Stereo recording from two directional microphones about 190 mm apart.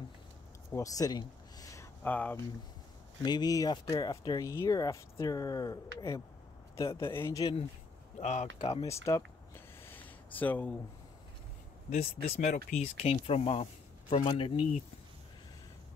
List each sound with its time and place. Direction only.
0.7 s a sound: 15° left (ahead or behind)
3.2 s speech: 20° left (ahead or behind)
8.2 s speech: 40° left (ahead or behind)
8.8 s speech: 15° left (ahead or behind)
10.0 s a sound: 10° left (ahead or behind)
11.9 s speech: 35° left (ahead or behind)